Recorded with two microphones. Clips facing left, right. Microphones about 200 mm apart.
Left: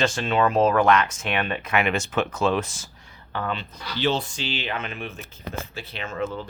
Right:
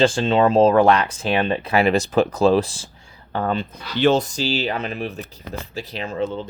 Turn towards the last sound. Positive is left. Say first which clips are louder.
# right 4 dB
turn(degrees=-35)  # may be behind; listen again after turning